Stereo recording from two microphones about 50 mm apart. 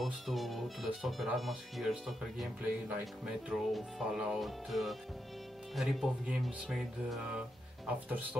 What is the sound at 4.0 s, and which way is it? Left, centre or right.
Speech, centre.